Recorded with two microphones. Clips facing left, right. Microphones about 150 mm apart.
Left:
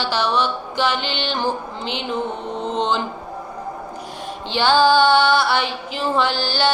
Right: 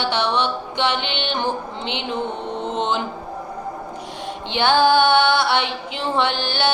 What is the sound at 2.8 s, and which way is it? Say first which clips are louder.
Speech: left 2 dB; 20° right (ahead or behind).